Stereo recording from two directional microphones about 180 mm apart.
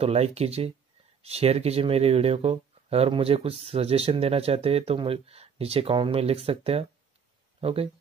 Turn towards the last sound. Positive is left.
turn(degrees=-30)  # may be behind; listen again after turning